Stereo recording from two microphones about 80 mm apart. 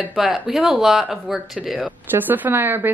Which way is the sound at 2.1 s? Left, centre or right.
Right.